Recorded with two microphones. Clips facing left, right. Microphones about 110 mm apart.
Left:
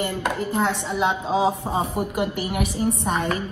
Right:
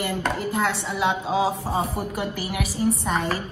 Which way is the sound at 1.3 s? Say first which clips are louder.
Left 1 dB; 20° left (ahead or behind).